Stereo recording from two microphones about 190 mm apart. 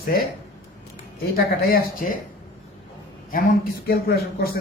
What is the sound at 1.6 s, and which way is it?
Speech, 50° left (ahead or behind).